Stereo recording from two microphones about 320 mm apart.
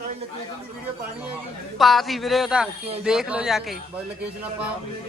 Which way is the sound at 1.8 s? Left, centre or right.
Centre.